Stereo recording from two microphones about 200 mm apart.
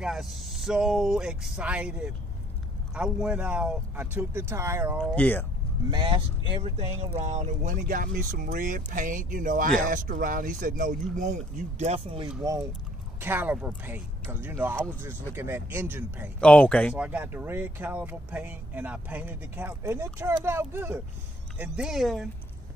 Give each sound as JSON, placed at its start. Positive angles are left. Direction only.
{"t": 0.0, "sound": "speech", "side_deg": 0}
{"t": 5.0, "sound": "speech", "side_deg": 5}
{"t": 5.9, "sound": "speech", "side_deg": -25}
{"t": 13.2, "sound": "speech", "side_deg": -10}
{"t": 16.3, "sound": "speech", "side_deg": 5}
{"t": 16.9, "sound": "speech", "side_deg": -5}